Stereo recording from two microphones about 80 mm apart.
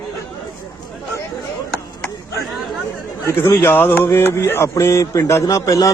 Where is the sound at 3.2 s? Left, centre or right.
Left.